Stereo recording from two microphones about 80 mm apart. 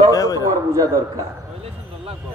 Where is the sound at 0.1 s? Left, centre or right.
Left.